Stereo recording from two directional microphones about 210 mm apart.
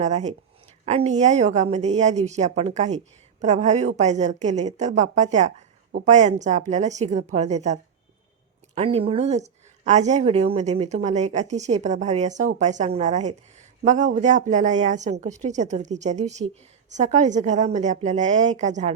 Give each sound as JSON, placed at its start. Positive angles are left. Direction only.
{"t": 0.0, "sound": "speech", "side_deg": -35}